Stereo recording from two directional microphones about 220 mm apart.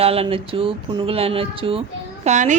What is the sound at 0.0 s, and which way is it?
A woman's voice, 25° right (ahead or behind).